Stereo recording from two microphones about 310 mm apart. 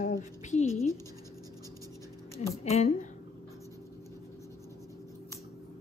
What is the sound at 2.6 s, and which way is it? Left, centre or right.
Speech, left.